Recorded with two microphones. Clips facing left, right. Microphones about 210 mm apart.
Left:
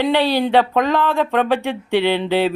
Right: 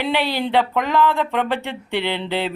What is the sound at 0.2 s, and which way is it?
Speech, 15° left (ahead or behind).